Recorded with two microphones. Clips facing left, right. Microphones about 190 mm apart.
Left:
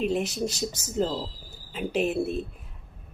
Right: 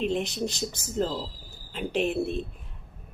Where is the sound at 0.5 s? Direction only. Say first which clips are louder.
Left 2 dB; 40° left (ahead or behind).